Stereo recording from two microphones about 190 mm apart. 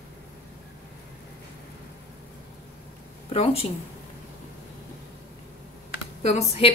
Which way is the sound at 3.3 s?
30° left (ahead or behind).